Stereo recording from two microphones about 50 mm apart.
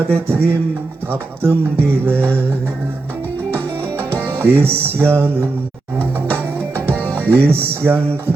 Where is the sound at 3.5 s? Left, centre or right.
Right.